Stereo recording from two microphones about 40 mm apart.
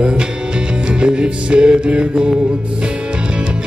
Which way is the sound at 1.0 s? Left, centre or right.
Right.